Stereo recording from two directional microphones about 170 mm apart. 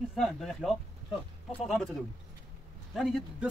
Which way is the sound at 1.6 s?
Centre (ahead or behind).